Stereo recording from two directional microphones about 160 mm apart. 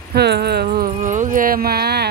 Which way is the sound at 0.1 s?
90° right.